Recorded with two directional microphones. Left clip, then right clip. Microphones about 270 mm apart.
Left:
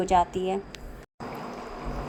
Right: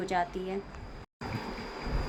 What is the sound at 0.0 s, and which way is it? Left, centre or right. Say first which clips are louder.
Speech: left 8 dB; centre.